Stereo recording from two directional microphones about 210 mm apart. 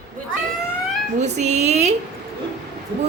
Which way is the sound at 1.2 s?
35° right (ahead or behind).